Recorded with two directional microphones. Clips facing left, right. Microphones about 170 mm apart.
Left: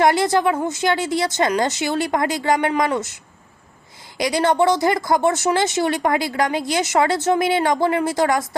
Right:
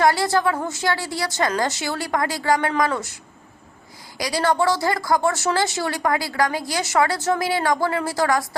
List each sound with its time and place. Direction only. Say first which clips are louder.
0.0 s speech: left 2 dB; 20° left (ahead or behind)
4.2 s speech: left 3 dB; 20° left (ahead or behind)